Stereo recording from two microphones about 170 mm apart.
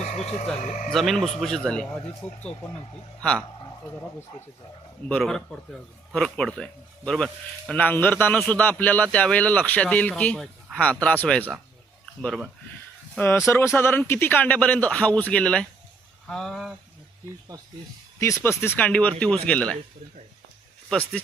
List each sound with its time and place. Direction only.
0.0 s a sound: 40° left (ahead or behind)
0.6 s speech: 50° left (ahead or behind)
0.9 s speech: centre (ahead or behind)
3.2 s speech: 5° left (ahead or behind)
13.1 s speech: 15° left (ahead or behind)
18.2 s speech: 15° left (ahead or behind)
20.9 s speech: 5° left (ahead or behind)